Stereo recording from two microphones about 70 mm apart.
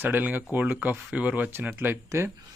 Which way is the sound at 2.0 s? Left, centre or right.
Right.